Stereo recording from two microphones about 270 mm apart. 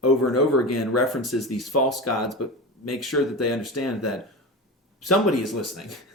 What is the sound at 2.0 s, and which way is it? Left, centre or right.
Speech, left.